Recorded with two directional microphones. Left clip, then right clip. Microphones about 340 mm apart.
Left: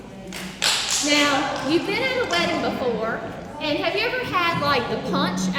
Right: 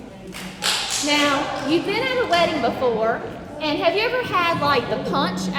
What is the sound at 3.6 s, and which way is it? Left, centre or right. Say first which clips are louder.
A woman's voice: right 3 dB; centre.